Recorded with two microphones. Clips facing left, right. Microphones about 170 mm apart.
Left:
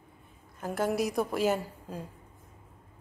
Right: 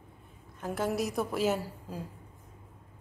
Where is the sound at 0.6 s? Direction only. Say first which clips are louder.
Left 2 dB; centre (ahead or behind).